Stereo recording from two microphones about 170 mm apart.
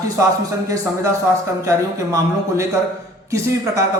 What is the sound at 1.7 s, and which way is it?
Speech, 15° right (ahead or behind).